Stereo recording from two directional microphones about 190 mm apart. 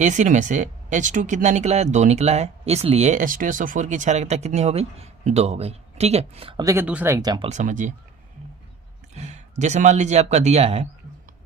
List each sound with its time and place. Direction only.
0.0 s speech: 40° right (ahead or behind); by 7.4 s 20° right (ahead or behind)
7.4 s speech: 40° right (ahead or behind)
9.1 s a man's voice: 35° right (ahead or behind)